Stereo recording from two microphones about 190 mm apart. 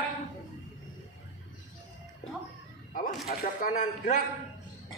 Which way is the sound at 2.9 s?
45° left (ahead or behind).